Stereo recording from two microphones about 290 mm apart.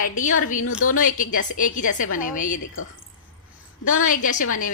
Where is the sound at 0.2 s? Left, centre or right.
Left.